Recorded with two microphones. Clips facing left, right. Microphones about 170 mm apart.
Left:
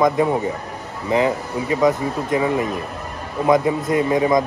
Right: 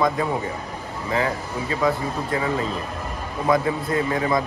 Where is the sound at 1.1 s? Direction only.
20° left (ahead or behind).